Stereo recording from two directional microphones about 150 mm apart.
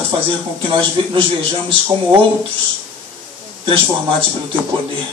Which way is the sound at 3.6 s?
35° right (ahead or behind).